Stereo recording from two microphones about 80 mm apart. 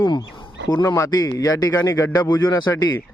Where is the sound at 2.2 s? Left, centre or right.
Left.